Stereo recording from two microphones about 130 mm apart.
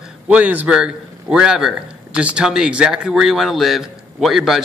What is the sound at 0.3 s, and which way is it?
Speech, 10° right (ahead or behind).